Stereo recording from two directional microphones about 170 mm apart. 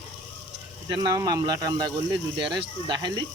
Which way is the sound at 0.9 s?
25° right (ahead or behind).